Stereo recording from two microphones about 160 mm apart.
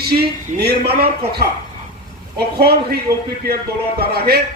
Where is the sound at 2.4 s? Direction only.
85° right.